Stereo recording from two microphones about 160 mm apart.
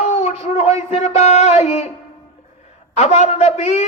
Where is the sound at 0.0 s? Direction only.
40° left (ahead or behind).